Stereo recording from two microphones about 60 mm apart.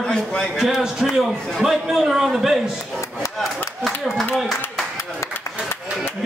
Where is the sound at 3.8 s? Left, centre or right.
Centre.